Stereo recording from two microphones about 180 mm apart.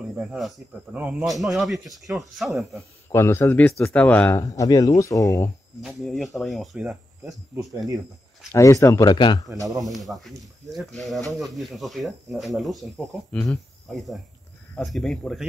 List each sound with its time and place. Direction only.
0.1 s speech: centre (ahead or behind)
3.1 s speech: 15° left (ahead or behind)
5.8 s speech: centre (ahead or behind)
8.5 s speech: 15° left (ahead or behind)
9.5 s speech: 20° right (ahead or behind)
10.1 s speech: centre (ahead or behind)